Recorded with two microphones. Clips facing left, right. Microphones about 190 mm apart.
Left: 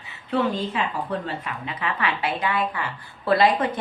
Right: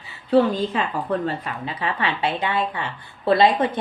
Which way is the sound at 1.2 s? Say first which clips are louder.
Right 4 dB; 30° right (ahead or behind).